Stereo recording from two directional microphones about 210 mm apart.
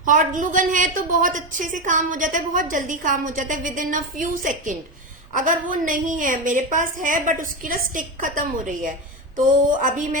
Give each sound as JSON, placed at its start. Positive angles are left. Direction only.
{"t": 0.0, "sound": "a woman's voice", "side_deg": -40}